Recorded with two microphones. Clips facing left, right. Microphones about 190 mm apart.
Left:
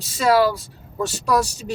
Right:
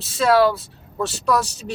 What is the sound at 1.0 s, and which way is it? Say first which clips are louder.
Speech: left 1 dB; 10° left (ahead or behind).